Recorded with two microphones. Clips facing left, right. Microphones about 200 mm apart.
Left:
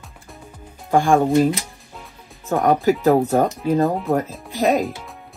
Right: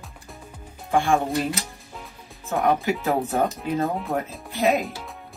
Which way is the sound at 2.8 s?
45° left (ahead or behind).